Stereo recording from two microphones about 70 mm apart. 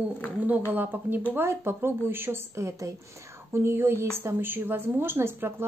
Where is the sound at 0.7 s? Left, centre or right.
Right.